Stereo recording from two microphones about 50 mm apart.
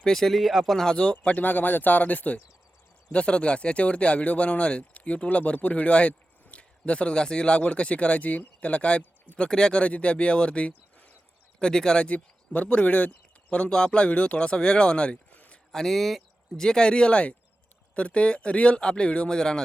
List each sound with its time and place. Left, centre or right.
0.0 s speech: centre
0.9 s speech: centre
1.1 s speech: left
3.1 s speech: left
9.4 s speech: centre
9.8 s speech: left
11.6 s speech: centre
12.0 s speech: left
15.7 s speech: centre
16.6 s speech: centre
19.4 s speech: centre